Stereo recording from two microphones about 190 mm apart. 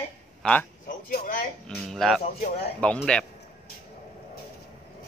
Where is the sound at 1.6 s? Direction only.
Centre (ahead or behind).